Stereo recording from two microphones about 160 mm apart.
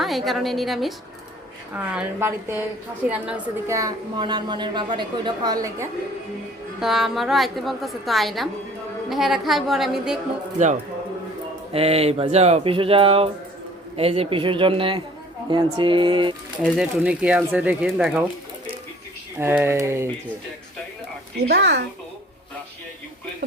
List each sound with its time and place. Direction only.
0.0 s a woman's voice: centre (ahead or behind)
3.8 s a woman's voice: 25° right (ahead or behind)
6.7 s a woman's voice: centre (ahead or behind)
11.7 s speech: 40° right (ahead or behind)
16.7 s speech: 5° right (ahead or behind)
19.4 s speech: 15° right (ahead or behind)
21.4 s a woman's voice: 90° right